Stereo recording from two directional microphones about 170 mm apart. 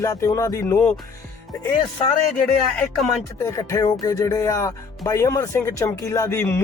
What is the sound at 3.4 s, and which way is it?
Music, 20° left (ahead or behind).